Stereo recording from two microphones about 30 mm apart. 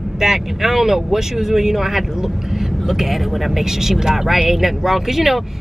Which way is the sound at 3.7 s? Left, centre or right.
Centre.